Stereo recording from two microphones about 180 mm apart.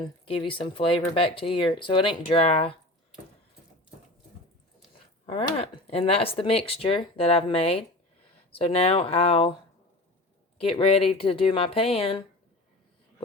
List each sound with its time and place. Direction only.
0.0 s speech: 30° left (ahead or behind)
5.2 s speech: 30° left (ahead or behind)
10.6 s speech: 30° left (ahead or behind)